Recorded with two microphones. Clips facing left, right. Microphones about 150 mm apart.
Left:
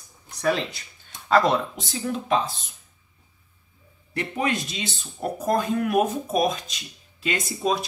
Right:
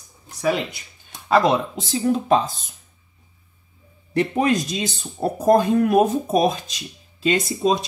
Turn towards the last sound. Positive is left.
turn(degrees=-25)  # may be behind; listen again after turning